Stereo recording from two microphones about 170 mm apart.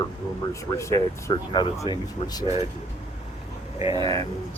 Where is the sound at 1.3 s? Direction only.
25° left (ahead or behind).